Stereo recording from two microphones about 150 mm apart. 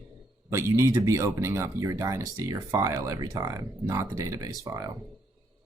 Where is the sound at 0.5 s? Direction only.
20° right (ahead or behind).